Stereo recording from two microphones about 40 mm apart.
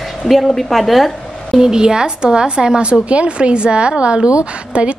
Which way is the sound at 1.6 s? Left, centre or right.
Centre.